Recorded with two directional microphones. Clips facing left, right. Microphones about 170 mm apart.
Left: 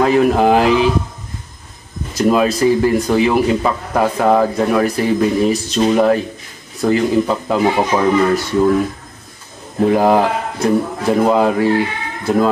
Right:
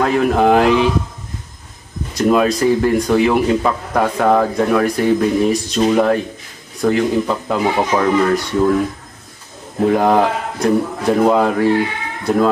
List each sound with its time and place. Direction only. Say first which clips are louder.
0.0 s speech: left 2 dB; 5° left (ahead or behind)
2.1 s speech: even; 5° left (ahead or behind)
9.8 s speech: left 1 dB; 5° left (ahead or behind)